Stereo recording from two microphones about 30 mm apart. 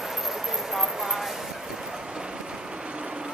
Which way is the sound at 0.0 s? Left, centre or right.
Centre.